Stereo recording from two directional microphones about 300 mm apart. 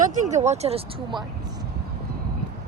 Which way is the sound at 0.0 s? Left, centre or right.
Right.